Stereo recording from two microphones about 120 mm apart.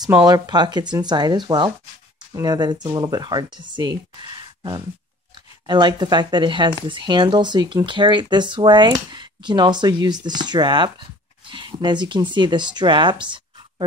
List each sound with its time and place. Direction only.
0.2 s speech: 35° right (ahead or behind)